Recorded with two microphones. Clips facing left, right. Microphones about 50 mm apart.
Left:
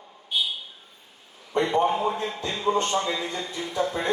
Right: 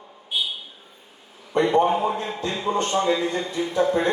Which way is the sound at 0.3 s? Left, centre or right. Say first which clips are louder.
Even; centre.